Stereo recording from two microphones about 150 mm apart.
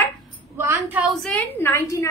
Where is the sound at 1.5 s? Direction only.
15° left (ahead or behind).